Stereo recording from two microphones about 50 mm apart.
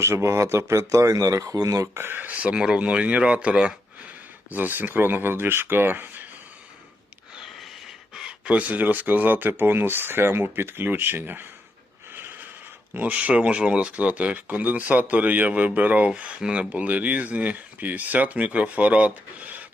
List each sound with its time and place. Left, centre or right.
0.0 s speech: right
2.0 s speech: right
2.2 s speech: right
4.5 s speech: right
7.3 s a sound: centre
8.3 s speech: right
12.1 s a sound: right
12.9 s speech: right
16.7 s speech: right